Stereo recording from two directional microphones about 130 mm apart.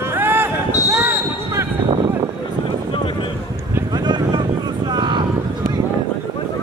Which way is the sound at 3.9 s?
35° right (ahead or behind).